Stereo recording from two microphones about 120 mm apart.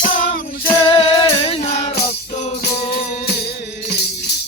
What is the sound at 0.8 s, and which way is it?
Music, 45° left (ahead or behind).